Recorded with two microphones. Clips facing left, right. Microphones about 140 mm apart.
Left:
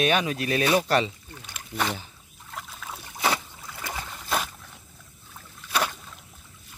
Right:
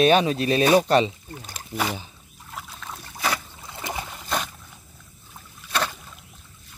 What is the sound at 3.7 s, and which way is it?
Boat, 20° right (ahead or behind).